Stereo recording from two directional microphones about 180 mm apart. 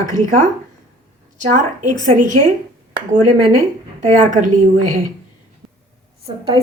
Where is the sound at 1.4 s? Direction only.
45° right (ahead or behind).